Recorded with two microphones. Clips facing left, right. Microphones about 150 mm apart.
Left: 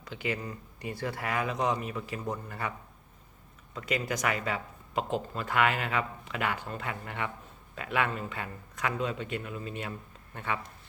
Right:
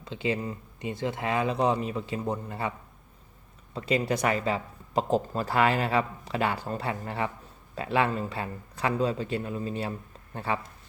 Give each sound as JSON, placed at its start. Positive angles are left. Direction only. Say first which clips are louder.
{"t": 0.0, "sound": "speech", "louder": "right 5 dB", "side_deg": -25}
{"t": 3.8, "sound": "speech", "louder": "right 5 dB", "side_deg": -30}